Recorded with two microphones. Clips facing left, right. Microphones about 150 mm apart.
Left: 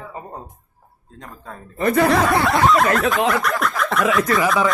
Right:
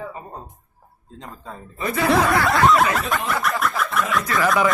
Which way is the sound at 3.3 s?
Centre (ahead or behind).